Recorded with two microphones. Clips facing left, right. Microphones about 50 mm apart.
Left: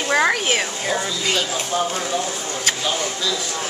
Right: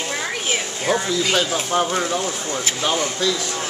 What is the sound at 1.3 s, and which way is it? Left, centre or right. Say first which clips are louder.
Speech: right 1 dB; right.